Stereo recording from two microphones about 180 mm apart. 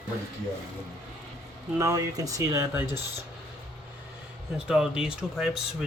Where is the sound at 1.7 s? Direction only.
15° right (ahead or behind).